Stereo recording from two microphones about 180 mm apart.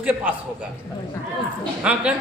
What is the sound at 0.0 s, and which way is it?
Speech, 10° right (ahead or behind).